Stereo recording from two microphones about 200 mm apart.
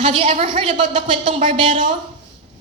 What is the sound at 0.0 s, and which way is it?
A woman's voice, 25° right (ahead or behind).